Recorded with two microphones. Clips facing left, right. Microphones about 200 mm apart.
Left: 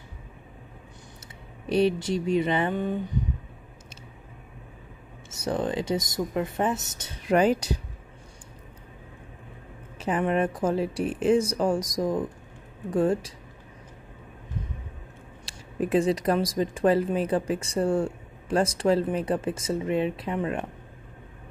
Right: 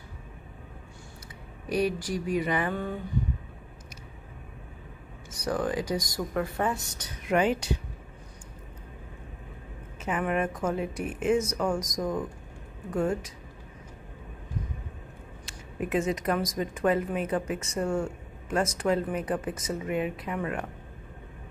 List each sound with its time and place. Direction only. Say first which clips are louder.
1.7 s speech: left 4 dB; 25° left (ahead or behind)
5.3 s speech: left 1 dB; 25° left (ahead or behind)
7.3 s speech: left 4 dB; 40° left (ahead or behind)
9.9 s speech: left 4 dB; 35° left (ahead or behind)
15.4 s speech: left 5 dB; 35° left (ahead or behind)